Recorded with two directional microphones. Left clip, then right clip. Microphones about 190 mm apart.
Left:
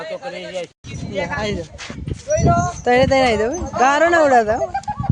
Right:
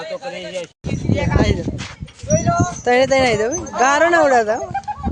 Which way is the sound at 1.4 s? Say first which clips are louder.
Right 4 dB; 5° right (ahead or behind).